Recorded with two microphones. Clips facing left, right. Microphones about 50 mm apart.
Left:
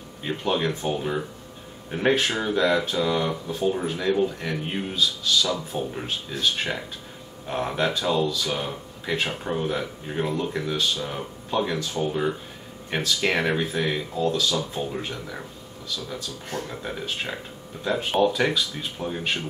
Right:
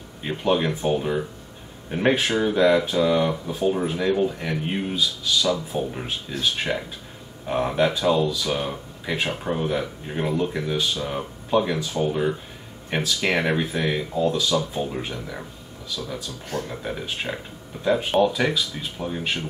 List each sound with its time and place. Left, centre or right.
0.2 s speech: centre
16.6 s speech: centre